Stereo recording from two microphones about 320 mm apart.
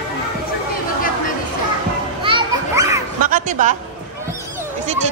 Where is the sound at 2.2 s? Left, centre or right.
Centre.